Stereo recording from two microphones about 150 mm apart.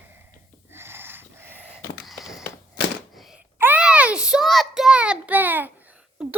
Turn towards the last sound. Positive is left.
turn(degrees=-5)  # may be behind; listen again after turning